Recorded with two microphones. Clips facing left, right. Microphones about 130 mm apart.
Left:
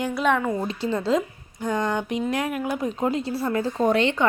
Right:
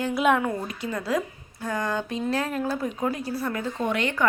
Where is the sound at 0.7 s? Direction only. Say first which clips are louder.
Left 5 dB; 30° left (ahead or behind).